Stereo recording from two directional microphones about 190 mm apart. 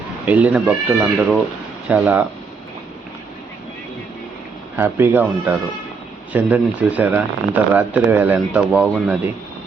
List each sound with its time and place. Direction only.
0.3 s speech: 10° right (ahead or behind)
4.8 s speech: 10° right (ahead or behind)